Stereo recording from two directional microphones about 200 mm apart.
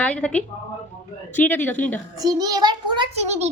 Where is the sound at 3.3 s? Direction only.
35° right (ahead or behind).